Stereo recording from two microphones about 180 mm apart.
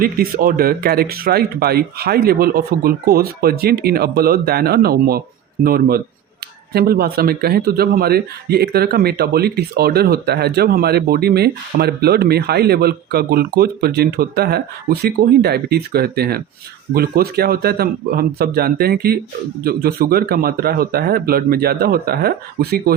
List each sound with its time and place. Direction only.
0.0 s a man's voice: 55° right (ahead or behind)